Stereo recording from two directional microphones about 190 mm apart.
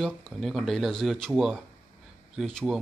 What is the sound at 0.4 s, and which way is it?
A man's voice, centre (ahead or behind).